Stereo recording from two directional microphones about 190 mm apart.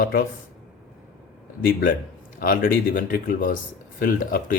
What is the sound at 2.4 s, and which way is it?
Speech, 45° left (ahead or behind).